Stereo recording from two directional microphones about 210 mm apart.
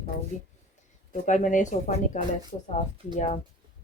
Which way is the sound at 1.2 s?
35° left (ahead or behind).